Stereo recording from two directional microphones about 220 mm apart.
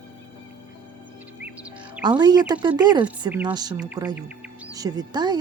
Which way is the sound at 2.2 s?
20° right (ahead or behind).